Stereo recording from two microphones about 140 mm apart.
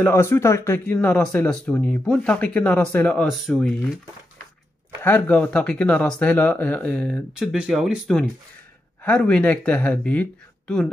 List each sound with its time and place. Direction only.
0.0 s speech: 20° left (ahead or behind)
3.3 s speech: centre (ahead or behind)
5.0 s speech: 10° left (ahead or behind)
7.3 s speech: 5° right (ahead or behind)